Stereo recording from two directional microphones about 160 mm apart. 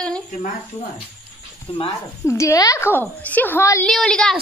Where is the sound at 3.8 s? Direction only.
5° left (ahead or behind).